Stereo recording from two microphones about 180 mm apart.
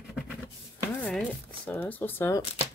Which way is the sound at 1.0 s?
5° left (ahead or behind).